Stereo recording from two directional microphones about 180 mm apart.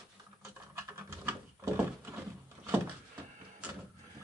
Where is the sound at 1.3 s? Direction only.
15° right (ahead or behind).